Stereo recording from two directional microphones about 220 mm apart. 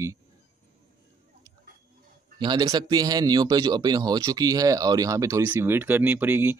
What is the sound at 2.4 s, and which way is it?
Speech, 20° right (ahead or behind).